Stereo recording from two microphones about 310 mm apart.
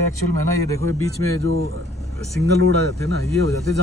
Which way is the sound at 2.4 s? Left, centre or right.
Right.